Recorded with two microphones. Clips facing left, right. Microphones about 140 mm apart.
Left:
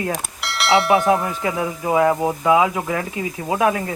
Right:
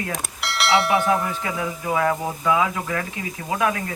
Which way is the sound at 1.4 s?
30° left (ahead or behind).